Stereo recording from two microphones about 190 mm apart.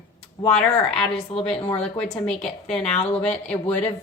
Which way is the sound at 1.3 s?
30° left (ahead or behind).